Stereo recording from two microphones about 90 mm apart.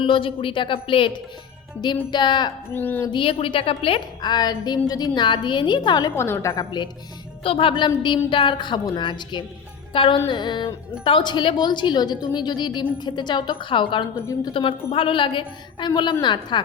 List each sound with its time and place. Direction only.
0.0 s a woman's voice: 75° left (ahead or behind)
1.8 s a woman's voice: 55° left (ahead or behind)
2.7 s a woman's voice: 20° left (ahead or behind)
3.1 s a woman's voice: 80° left
4.2 s a woman's voice: 50° left (ahead or behind)
6.1 s speech: 30° left (ahead or behind)
7.4 s a woman's voice: 90° left
8.0 s a woman's voice: 65° left (ahead or behind)
9.9 s a woman's voice: 70° left (ahead or behind)
14.5 s a woman's voice: 85° left; by 16.6 s 60° left (ahead or behind)